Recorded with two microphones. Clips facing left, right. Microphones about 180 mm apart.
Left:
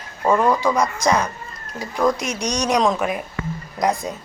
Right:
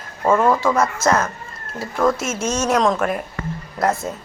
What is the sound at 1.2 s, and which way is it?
Cat, 15° left (ahead or behind).